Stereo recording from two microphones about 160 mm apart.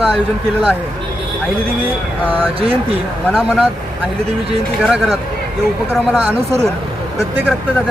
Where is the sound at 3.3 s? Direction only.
Centre (ahead or behind).